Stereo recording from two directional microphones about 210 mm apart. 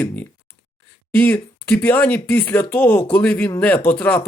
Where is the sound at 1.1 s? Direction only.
10° left (ahead or behind).